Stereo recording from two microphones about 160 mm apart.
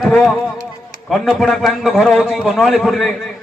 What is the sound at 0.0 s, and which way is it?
A man's voice, centre (ahead or behind).